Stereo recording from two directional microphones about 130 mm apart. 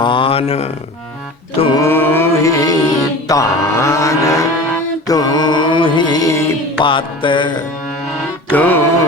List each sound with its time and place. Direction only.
0.0 s speech: 40° left (ahead or behind)
1.8 s music: 15° left (ahead or behind)
6.8 s music: 40° left (ahead or behind)
8.5 s music: 15° left (ahead or behind)